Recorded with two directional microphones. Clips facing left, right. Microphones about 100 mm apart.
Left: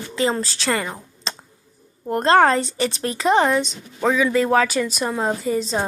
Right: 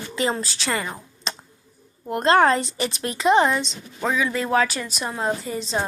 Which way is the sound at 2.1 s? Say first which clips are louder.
Left 2 dB; 40° left (ahead or behind).